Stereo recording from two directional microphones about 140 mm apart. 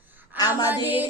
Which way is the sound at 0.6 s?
15° right (ahead or behind).